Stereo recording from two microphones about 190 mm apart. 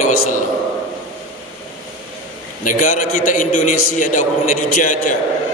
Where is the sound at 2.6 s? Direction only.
45° left (ahead or behind).